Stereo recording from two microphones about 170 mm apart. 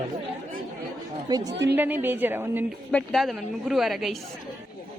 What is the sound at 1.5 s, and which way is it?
Speech, 85° right.